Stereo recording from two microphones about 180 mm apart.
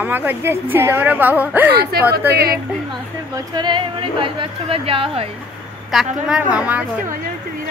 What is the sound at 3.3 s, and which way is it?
Speech, 25° right (ahead or behind).